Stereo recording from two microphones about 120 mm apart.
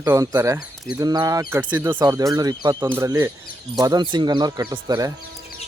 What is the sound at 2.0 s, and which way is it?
Speech, 30° right (ahead or behind).